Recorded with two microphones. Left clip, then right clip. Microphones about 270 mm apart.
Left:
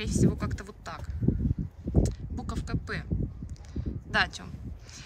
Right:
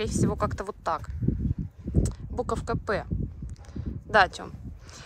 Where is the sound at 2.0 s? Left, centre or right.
Centre.